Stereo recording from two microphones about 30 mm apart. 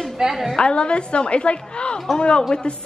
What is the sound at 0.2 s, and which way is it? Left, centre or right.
Speech, centre.